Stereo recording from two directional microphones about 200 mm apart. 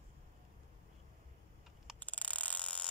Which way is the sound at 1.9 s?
5° left (ahead or behind).